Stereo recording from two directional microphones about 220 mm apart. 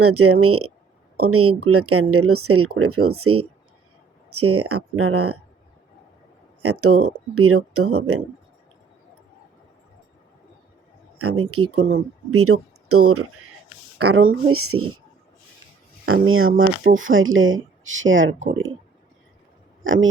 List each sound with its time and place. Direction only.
0.0 s speech: 90° right
6.6 s speech: 90° right
11.2 s speech: 85° right
14.1 s speech: 65° right (ahead or behind)
16.2 s speech: 70° right (ahead or behind)
19.8 s speech: 60° right (ahead or behind)